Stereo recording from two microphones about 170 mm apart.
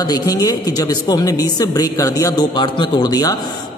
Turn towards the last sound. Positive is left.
turn(degrees=25)  # may be behind; listen again after turning